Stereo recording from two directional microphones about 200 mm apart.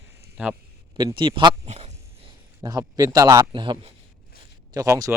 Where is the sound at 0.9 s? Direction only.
25° right (ahead or behind).